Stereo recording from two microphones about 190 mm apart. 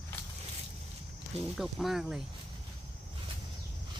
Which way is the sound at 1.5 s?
Centre (ahead or behind).